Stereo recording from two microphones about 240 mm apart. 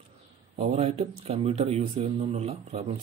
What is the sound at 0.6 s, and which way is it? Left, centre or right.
A man's voice, right.